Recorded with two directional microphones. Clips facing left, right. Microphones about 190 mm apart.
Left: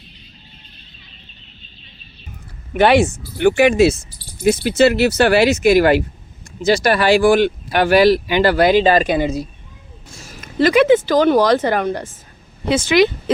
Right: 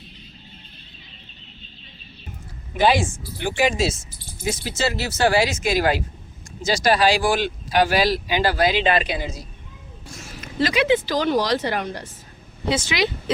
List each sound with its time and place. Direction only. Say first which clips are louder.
2.7 s speech: left 6 dB; 65° left (ahead or behind)
8.8 s speech: left 7 dB; 40° left (ahead or behind)
9.1 s speech: left 11 dB; 60° left (ahead or behind)
10.2 s speech: left 5 dB; 40° left (ahead or behind)